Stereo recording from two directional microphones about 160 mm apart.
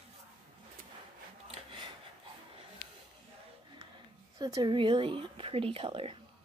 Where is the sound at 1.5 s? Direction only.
35° right (ahead or behind).